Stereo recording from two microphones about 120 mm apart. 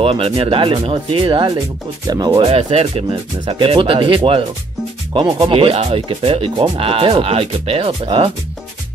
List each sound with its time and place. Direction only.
0.0 s speech: 50° right (ahead or behind)
2.0 s speech: 35° right (ahead or behind)
2.4 s speech: 55° right (ahead or behind)